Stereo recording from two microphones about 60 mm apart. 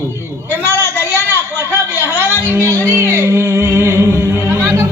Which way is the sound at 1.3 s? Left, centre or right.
Left.